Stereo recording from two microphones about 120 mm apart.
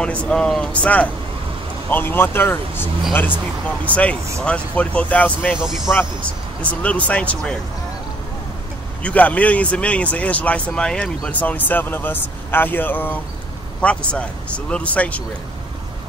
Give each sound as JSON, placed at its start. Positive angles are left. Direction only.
{"t": 0.0, "sound": "speech", "side_deg": 10}
{"t": 5.6, "sound": "speech", "side_deg": -5}
{"t": 6.6, "sound": "speech", "side_deg": 10}
{"t": 9.0, "sound": "speech", "side_deg": 10}